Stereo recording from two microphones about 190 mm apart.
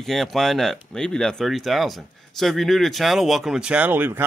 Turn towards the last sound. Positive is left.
turn(degrees=-10)  # may be behind; listen again after turning